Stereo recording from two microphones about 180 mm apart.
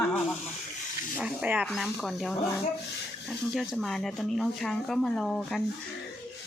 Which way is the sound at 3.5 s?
Centre (ahead or behind).